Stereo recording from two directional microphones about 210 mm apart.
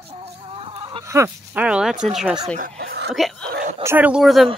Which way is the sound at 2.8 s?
50° right (ahead or behind).